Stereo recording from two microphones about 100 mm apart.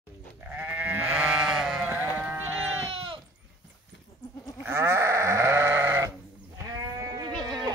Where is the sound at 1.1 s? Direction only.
5° right (ahead or behind).